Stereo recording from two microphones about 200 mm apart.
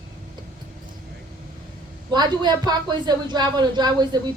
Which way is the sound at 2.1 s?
20° right (ahead or behind).